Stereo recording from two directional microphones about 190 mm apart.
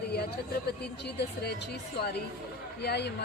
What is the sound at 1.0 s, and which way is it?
Speech, 60° left (ahead or behind).